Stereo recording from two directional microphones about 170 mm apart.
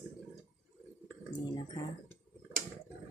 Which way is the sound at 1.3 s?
25° left (ahead or behind).